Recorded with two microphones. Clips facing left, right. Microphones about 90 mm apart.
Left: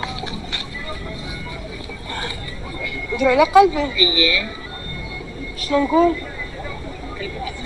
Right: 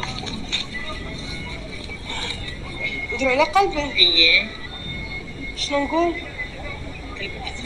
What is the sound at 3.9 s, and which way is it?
Music, 30° left (ahead or behind).